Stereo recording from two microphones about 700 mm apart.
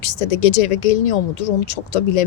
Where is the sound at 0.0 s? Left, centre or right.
Left.